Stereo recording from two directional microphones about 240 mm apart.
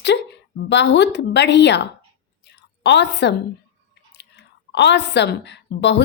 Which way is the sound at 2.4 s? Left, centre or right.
Left.